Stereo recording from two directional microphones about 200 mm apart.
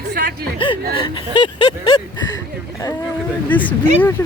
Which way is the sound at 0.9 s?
25° left (ahead or behind).